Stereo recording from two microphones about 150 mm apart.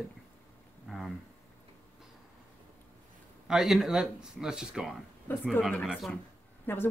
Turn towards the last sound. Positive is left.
turn(degrees=15)  # may be behind; listen again after turning